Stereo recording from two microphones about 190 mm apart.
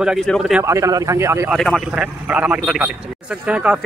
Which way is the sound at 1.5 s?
Centre (ahead or behind).